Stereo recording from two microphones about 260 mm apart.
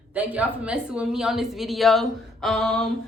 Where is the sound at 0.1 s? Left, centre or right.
Centre.